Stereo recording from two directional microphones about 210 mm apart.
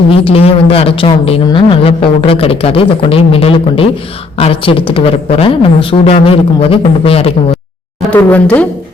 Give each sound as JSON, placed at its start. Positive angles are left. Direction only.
{"t": 0.1, "sound": "a woman's voice", "side_deg": 25}
{"t": 8.1, "sound": "speech", "side_deg": 10}